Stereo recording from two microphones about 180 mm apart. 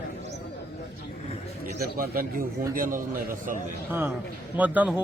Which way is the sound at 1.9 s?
55° right (ahead or behind).